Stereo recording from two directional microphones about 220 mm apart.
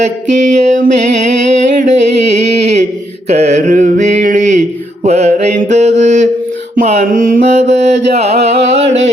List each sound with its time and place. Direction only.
0.0 s a sound: 35° right (ahead or behind)
3.2 s mantra: 30° right (ahead or behind)
8.1 s music: 30° right (ahead or behind)